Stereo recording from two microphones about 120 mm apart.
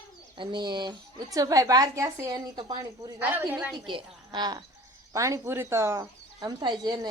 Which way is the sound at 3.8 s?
40° right (ahead or behind).